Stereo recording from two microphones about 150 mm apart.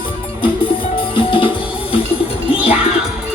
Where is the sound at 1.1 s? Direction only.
35° left (ahead or behind).